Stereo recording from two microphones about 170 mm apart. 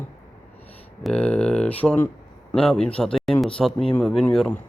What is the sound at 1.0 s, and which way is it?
Speech, 5° left (ahead or behind).